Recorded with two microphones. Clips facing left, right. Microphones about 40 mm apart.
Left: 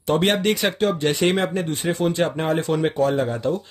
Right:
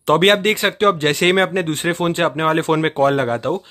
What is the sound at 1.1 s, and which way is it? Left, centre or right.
Speech, right.